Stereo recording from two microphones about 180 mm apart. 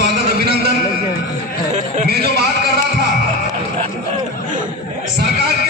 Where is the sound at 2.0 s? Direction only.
65° right (ahead or behind).